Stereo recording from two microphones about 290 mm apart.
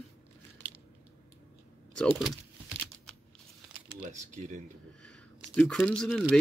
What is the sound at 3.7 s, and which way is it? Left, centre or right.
Crumpling, right.